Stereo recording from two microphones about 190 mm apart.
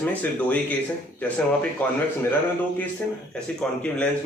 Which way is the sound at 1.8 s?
10° left (ahead or behind).